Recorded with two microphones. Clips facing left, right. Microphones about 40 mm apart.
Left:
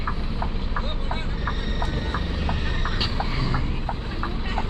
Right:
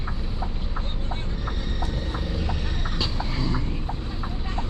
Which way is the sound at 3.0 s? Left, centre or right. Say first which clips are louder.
Right 1 dB; centre.